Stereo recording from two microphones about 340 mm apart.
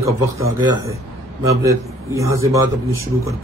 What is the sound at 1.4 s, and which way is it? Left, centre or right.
A man's voice, centre.